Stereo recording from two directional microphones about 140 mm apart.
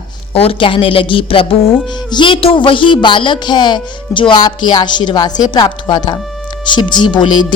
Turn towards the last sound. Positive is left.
turn(degrees=35)  # may be behind; listen again after turning